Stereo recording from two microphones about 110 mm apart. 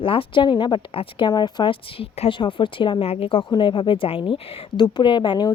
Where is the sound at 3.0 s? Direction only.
60° left (ahead or behind).